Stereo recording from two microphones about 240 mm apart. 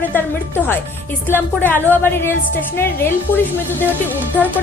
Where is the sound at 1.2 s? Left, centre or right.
Centre.